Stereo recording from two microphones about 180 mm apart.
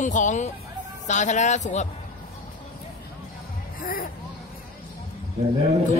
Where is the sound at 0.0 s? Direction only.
45° left (ahead or behind).